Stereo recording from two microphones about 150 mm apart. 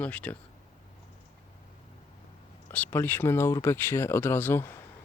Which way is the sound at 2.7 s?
10° left (ahead or behind).